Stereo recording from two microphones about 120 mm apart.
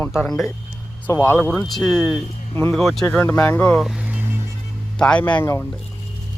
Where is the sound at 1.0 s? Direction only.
15° left (ahead or behind).